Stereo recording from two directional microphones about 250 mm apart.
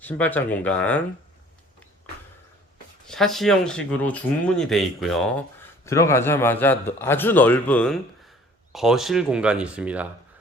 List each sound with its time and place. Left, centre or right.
0.0 s a man's voice: centre
3.1 s a man's voice: centre